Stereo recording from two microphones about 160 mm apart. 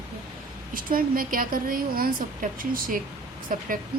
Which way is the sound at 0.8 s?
60° right (ahead or behind).